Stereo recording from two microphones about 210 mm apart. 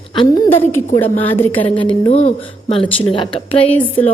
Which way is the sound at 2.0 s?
30° left (ahead or behind).